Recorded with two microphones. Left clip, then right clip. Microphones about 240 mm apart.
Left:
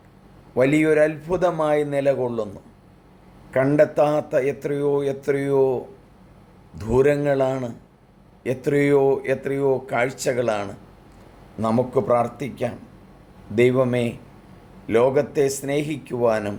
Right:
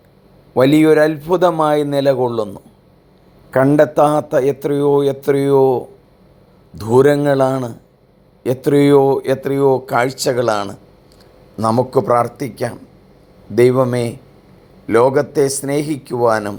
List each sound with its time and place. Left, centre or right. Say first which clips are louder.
0.5 s a man's voice: right 7 dB; right
6.8 s a man's voice: right 7 dB; right